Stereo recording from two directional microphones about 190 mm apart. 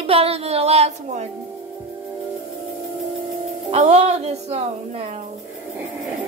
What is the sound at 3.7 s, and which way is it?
Music, 35° right (ahead or behind).